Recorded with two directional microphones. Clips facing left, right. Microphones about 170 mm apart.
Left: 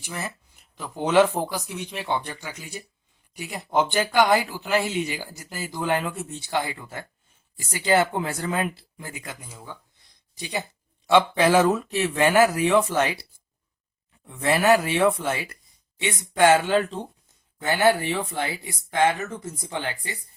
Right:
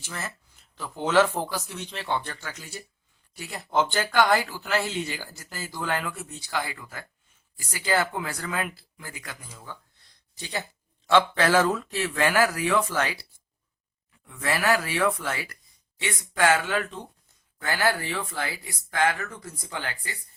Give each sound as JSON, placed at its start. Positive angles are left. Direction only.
{"t": 0.0, "sound": "speech", "side_deg": 15}
{"t": 14.3, "sound": "speech", "side_deg": 20}